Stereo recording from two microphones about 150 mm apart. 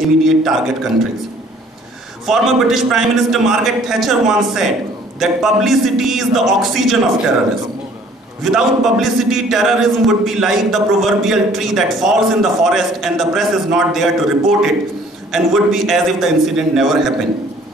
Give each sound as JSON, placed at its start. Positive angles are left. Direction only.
{"t": 0.2, "sound": "a man's voice", "side_deg": 0}
{"t": 2.3, "sound": "a man's voice", "side_deg": 0}
{"t": 8.4, "sound": "a man's voice", "side_deg": 0}